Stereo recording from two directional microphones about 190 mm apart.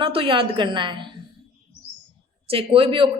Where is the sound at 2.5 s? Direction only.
30° right (ahead or behind).